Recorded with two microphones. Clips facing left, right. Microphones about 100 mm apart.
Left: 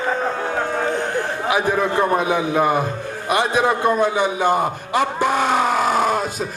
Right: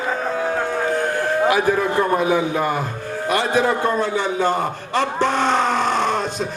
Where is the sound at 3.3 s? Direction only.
20° left (ahead or behind).